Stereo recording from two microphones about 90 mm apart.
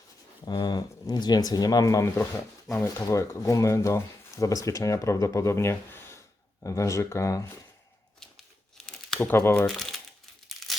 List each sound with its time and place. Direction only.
0.4 s speech: 50° left (ahead or behind)
8.9 s tearing: 5° left (ahead or behind)
9.2 s speech: 30° left (ahead or behind)
9.6 s speech: centre (ahead or behind)